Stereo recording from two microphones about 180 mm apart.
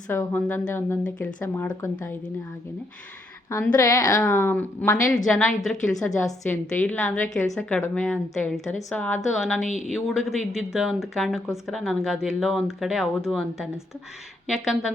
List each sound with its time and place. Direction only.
0.1 s a woman's voice: 10° left (ahead or behind)
3.5 s a woman's voice: 15° left (ahead or behind); by 14.9 s centre (ahead or behind)